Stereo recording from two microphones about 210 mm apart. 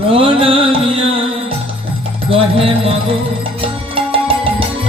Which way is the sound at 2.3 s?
25° right (ahead or behind).